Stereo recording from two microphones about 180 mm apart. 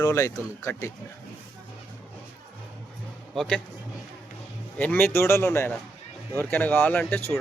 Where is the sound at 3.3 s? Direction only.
5° left (ahead or behind).